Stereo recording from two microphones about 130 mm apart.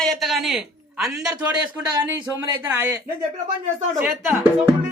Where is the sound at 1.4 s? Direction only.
30° right (ahead or behind).